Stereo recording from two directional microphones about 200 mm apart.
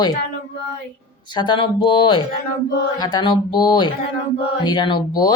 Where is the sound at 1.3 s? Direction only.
25° left (ahead or behind).